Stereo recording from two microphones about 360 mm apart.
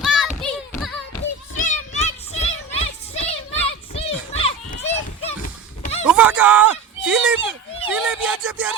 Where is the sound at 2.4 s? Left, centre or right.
Centre.